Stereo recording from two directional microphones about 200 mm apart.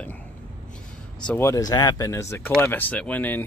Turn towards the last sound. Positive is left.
turn(degrees=10)  # may be behind; listen again after turning